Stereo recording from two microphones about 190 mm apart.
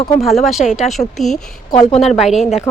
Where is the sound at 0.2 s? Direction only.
Centre (ahead or behind).